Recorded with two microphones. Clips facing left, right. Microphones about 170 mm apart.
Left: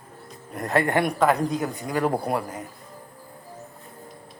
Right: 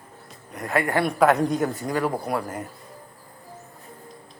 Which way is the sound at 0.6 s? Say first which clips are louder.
Left 2 dB; 40° left (ahead or behind).